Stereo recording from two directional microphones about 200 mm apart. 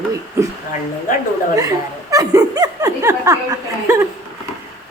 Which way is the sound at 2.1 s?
15° right (ahead or behind).